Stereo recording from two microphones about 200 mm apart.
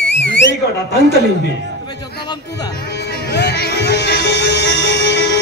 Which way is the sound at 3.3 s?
55° left (ahead or behind).